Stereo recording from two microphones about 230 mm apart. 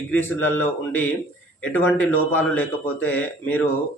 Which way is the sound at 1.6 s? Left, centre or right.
Centre.